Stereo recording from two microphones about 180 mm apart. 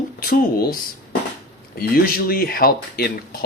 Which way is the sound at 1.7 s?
55° left (ahead or behind).